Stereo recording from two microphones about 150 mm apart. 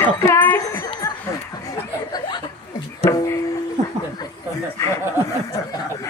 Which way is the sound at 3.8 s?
50° right (ahead or behind).